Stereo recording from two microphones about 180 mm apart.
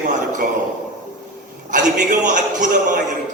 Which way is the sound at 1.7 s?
45° right (ahead or behind).